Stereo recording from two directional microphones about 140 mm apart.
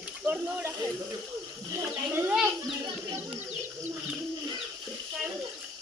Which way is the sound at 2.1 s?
15° right (ahead or behind).